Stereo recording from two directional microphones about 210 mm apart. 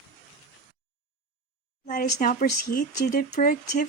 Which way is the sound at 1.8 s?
40° left (ahead or behind).